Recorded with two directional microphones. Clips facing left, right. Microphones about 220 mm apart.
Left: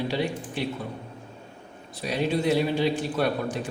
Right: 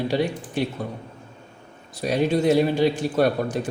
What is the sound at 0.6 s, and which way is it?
Speech, 45° right (ahead or behind).